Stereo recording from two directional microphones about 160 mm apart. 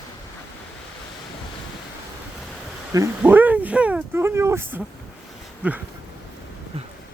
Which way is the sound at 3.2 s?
10° right (ahead or behind).